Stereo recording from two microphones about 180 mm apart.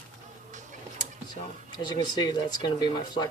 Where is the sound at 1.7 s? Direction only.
25° left (ahead or behind).